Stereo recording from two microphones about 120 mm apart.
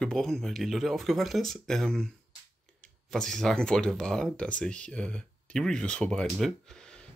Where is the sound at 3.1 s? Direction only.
5° left (ahead or behind).